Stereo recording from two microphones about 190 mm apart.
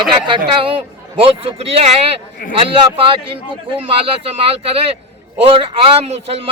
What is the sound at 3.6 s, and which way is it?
Speech, 30° right (ahead or behind).